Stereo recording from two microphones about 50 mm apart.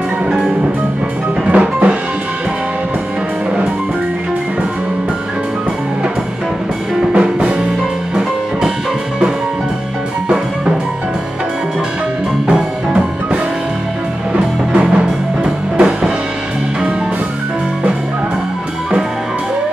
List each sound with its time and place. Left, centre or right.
1.4 s music: right
7.1 s music: right
10.2 s music: centre
12.4 s music: centre